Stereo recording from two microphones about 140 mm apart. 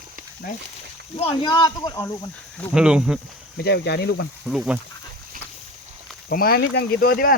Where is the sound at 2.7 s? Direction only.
5° right (ahead or behind).